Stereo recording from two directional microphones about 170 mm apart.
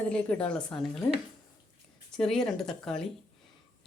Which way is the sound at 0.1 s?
5° left (ahead or behind).